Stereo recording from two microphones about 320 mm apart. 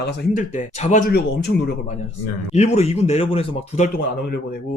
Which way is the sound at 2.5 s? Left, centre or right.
Centre.